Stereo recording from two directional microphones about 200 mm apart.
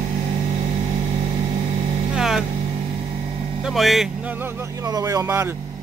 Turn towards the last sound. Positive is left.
turn(degrees=-15)  # may be behind; listen again after turning